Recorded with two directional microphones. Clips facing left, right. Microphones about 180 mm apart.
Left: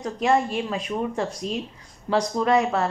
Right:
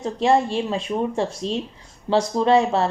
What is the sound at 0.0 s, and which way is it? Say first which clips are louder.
A woman's voice: right 3 dB; 30° right (ahead or behind).